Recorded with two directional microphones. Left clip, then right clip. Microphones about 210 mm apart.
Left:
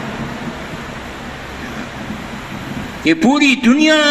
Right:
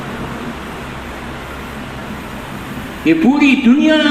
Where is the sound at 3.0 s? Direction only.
20° left (ahead or behind).